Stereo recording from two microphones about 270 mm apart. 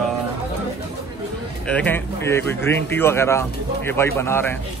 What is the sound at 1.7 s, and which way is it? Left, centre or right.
Speech, centre.